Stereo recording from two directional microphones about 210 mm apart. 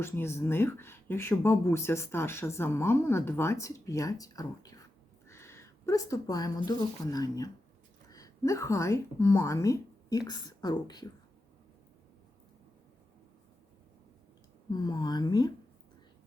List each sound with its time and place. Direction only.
0.0 s a woman's voice: 10° left (ahead or behind)
14.7 s speech: 20° left (ahead or behind)